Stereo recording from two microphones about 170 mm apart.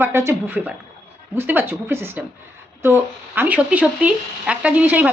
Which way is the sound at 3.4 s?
10° right (ahead or behind).